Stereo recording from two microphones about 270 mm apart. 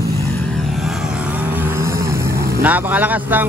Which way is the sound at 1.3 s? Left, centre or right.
Centre.